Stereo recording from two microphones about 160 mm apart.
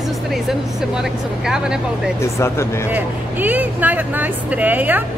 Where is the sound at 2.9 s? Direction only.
10° right (ahead or behind).